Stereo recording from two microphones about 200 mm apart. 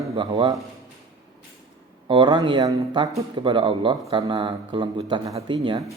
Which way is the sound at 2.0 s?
25° right (ahead or behind).